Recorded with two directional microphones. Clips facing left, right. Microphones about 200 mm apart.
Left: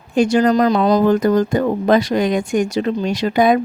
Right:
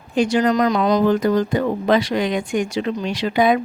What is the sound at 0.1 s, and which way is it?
Speech, 45° left (ahead or behind).